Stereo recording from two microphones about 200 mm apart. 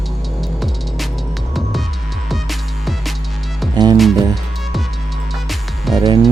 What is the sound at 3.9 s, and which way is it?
Speech, centre (ahead or behind).